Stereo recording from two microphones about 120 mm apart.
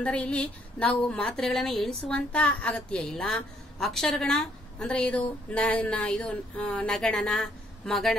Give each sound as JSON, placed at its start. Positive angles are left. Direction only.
{"t": 0.0, "sound": "a woman's voice", "side_deg": 10}